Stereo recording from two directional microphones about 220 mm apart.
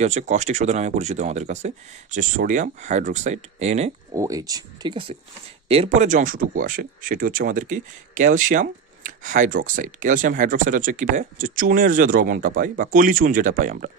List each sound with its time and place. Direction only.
0.0 s speech: 30° right (ahead or behind)
4.1 s speech: 15° right (ahead or behind); by 13.9 s 35° right (ahead or behind)